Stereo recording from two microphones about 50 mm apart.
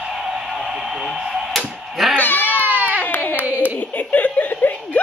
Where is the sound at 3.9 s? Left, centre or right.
Left.